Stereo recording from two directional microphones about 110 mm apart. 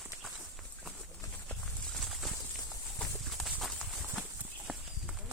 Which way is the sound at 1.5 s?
5° left (ahead or behind).